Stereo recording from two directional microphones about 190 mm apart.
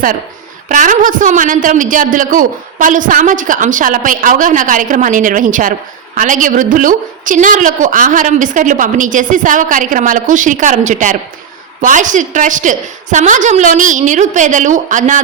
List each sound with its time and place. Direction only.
0.7 s a woman's voice: 45° right (ahead or behind)